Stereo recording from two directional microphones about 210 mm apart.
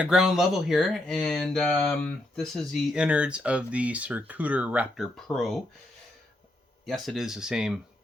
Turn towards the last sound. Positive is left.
turn(degrees=-5)  # may be behind; listen again after turning